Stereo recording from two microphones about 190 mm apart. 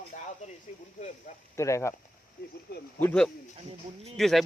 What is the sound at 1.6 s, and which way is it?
Speech, 15° left (ahead or behind).